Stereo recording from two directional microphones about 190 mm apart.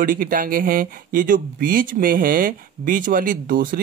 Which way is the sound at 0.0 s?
45° right (ahead or behind).